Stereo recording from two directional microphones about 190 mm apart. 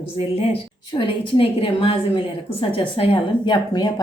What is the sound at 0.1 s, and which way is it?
A woman's voice, 30° left (ahead or behind).